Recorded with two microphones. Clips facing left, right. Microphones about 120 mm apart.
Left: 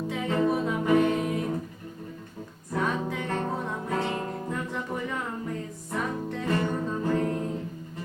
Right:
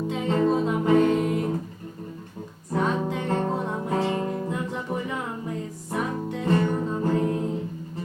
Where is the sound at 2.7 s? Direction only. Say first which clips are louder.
Right 3 dB; 20° right (ahead or behind).